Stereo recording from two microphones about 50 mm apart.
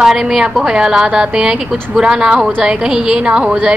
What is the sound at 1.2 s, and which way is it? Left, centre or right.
A woman's voice, centre.